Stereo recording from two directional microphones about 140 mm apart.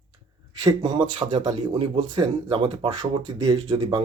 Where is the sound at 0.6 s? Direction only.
30° right (ahead or behind).